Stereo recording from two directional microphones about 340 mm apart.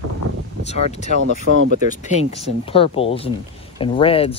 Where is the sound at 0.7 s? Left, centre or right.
Centre.